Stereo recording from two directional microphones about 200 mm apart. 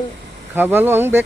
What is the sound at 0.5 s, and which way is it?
Speech, 10° right (ahead or behind).